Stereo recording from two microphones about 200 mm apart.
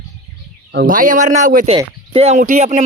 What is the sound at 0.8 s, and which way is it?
Speech, 40° right (ahead or behind).